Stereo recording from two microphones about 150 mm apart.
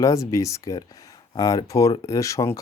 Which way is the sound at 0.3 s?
20° left (ahead or behind).